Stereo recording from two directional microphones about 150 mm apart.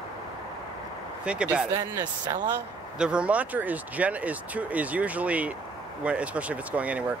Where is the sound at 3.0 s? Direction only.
5° right (ahead or behind).